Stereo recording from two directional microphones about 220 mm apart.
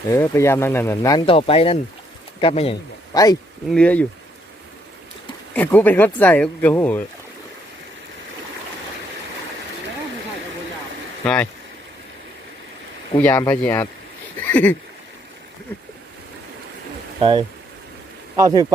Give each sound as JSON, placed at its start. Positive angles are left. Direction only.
{"t": 0.1, "sound": "speech", "side_deg": 10}
{"t": 3.7, "sound": "speech", "side_deg": 5}
{"t": 5.5, "sound": "speech", "side_deg": 10}
{"t": 11.2, "sound": "speech", "side_deg": 5}
{"t": 13.1, "sound": "speech", "side_deg": 10}
{"t": 17.2, "sound": "speech", "side_deg": -20}